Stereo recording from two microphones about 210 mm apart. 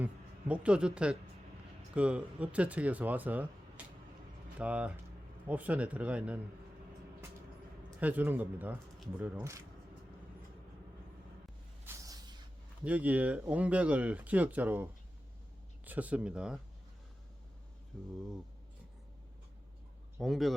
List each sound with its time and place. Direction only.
0.0 s speech: 5° right (ahead or behind)
3.8 s vehicle: 5° right (ahead or behind)
4.5 s speech: 5° right (ahead or behind)
7.9 s speech: 5° right (ahead or behind)
11.9 s a sound: 15° right (ahead or behind)
12.8 s speech: 5° right (ahead or behind)
17.9 s speech: 5° left (ahead or behind)
20.1 s speech: centre (ahead or behind)